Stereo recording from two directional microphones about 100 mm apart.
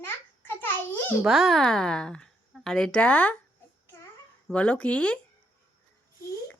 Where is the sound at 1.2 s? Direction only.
Centre (ahead or behind); by 3.4 s 15° left (ahead or behind).